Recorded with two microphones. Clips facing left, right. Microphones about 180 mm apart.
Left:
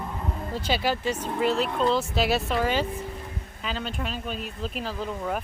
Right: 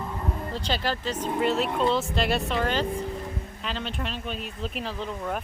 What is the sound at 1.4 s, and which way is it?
Speech, centre (ahead or behind).